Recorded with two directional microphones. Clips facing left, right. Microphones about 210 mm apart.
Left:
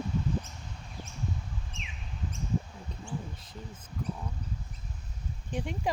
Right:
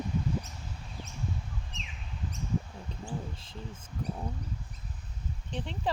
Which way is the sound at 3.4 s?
30° right (ahead or behind).